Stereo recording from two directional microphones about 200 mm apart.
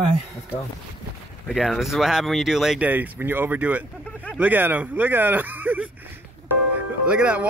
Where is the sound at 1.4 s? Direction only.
Centre (ahead or behind).